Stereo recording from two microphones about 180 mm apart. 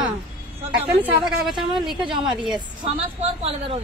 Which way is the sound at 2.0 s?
25° right (ahead or behind).